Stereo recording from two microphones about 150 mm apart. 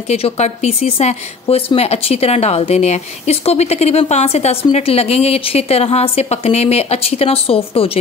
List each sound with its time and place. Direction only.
0.1 s speech: 45° left (ahead or behind)